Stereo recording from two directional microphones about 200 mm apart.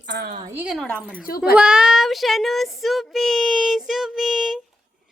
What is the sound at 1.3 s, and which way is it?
Speech, 45° left (ahead or behind).